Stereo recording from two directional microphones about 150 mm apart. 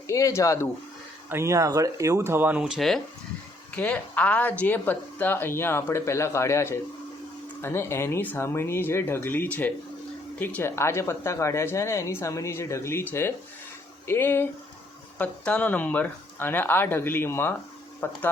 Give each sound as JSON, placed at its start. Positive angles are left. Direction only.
{"t": 0.1, "sound": "speech", "side_deg": 20}
{"t": 1.3, "sound": "speech", "side_deg": -20}